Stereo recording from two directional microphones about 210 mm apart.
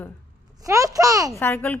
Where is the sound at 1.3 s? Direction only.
10° left (ahead or behind).